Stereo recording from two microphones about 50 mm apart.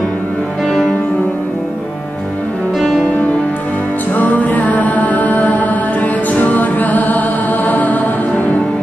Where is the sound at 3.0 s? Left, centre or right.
Left.